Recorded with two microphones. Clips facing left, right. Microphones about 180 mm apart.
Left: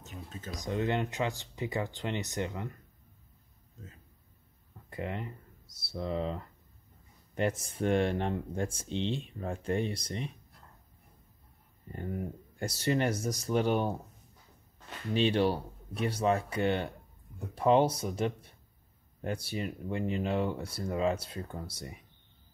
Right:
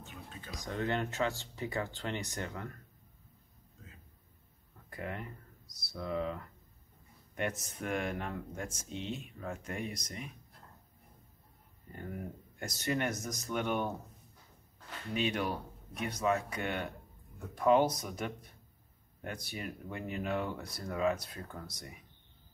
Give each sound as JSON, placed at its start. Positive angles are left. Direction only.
{"t": 0.0, "sound": "a sound", "side_deg": 40}
{"t": 0.7, "sound": "speech", "side_deg": 15}
{"t": 4.8, "sound": "speech", "side_deg": 25}
{"t": 11.9, "sound": "speech", "side_deg": 30}
{"t": 15.1, "sound": "speech", "side_deg": 30}